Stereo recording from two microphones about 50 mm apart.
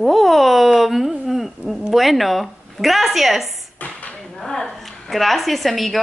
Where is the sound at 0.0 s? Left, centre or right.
Centre.